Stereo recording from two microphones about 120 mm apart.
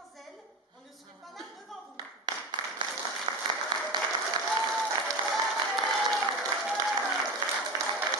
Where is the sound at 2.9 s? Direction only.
Centre (ahead or behind).